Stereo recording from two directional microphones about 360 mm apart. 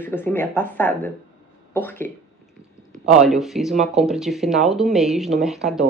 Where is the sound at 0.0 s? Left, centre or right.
Centre.